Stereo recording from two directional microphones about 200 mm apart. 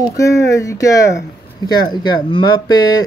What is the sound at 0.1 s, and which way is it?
Speech, 15° left (ahead or behind).